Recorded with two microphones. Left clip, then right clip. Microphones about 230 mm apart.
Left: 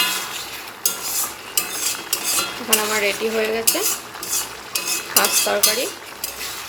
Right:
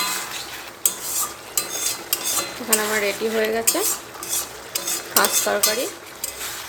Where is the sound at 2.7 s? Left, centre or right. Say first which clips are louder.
Left 2 dB; centre.